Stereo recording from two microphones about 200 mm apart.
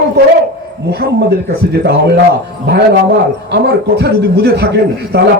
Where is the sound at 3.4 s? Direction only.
55° right (ahead or behind).